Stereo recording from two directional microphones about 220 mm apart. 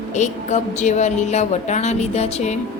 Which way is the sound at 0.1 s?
30° left (ahead or behind).